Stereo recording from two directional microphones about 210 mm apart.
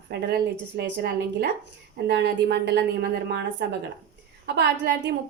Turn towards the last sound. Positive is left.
turn(degrees=-55)  # may be behind; listen again after turning